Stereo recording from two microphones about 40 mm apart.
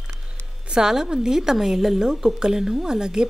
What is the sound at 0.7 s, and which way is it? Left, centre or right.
A woman's voice, centre.